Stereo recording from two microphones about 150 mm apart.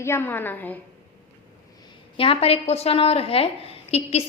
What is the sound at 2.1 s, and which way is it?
A woman's voice, 40° left (ahead or behind).